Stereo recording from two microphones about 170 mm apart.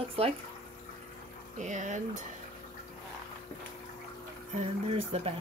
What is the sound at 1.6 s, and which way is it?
Speech, 45° right (ahead or behind).